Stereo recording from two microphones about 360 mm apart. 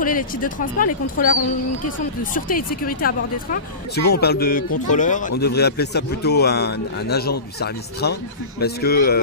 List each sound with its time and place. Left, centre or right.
0.0 s a man's voice: left
2.3 s a man's voice: left